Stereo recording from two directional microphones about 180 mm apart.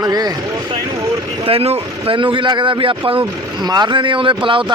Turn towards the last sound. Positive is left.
turn(degrees=-30)  # may be behind; listen again after turning